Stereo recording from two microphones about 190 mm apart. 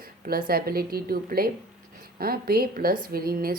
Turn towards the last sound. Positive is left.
turn(degrees=-50)  # may be behind; listen again after turning